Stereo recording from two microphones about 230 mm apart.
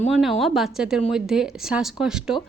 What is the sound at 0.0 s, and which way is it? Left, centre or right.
Speech, centre.